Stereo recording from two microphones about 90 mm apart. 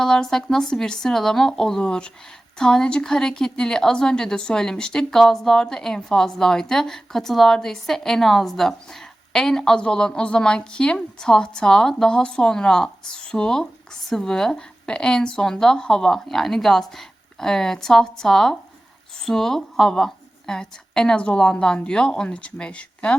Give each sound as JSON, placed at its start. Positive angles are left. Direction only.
{"t": 0.0, "sound": "a woman's voice", "side_deg": 5}